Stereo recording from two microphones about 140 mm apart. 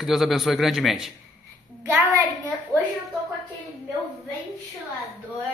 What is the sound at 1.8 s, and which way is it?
Speech, 20° right (ahead or behind).